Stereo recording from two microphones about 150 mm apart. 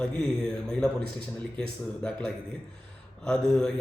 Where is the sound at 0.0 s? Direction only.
5° left (ahead or behind).